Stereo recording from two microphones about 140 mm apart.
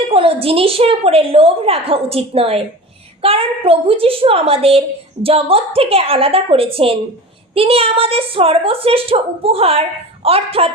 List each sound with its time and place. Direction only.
0.1 s a woman's voice: 40° right (ahead or behind)